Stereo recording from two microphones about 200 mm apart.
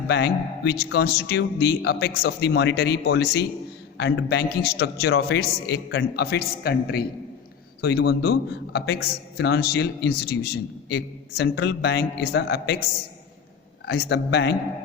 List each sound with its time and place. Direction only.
0.1 s a man's voice: 55° left (ahead or behind)
13.8 s a man's voice: 60° left (ahead or behind)